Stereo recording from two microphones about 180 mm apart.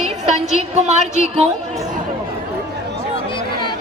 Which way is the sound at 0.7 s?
40° right (ahead or behind).